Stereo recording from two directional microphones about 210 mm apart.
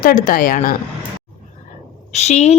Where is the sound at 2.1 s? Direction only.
30° left (ahead or behind).